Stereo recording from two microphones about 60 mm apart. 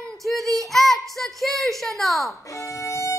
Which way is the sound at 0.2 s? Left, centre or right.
Centre.